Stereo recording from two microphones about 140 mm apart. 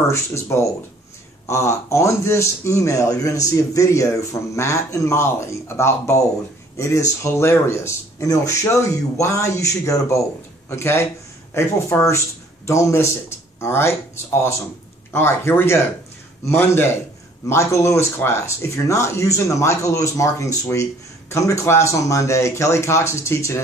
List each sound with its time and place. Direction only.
0.1 s a man's voice: 20° left (ahead or behind)
15.1 s a man's voice: 15° left (ahead or behind)